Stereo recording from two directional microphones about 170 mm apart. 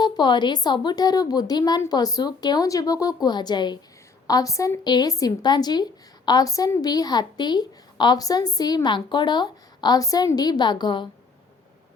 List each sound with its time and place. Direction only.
0.0 s a woman's voice: 25° left (ahead or behind)